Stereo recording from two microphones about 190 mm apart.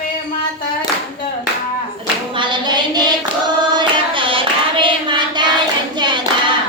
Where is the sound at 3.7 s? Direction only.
25° right (ahead or behind).